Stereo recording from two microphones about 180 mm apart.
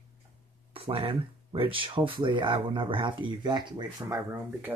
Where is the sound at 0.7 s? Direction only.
30° right (ahead or behind).